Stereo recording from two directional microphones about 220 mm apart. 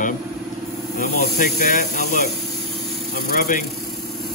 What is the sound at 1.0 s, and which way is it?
Speech, 35° left (ahead or behind).